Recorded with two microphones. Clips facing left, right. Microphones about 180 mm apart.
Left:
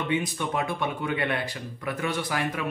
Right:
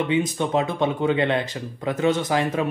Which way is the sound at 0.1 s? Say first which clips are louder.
Right 6 dB; 20° right (ahead or behind).